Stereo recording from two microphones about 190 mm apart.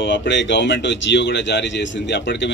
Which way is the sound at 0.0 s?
70° left (ahead or behind).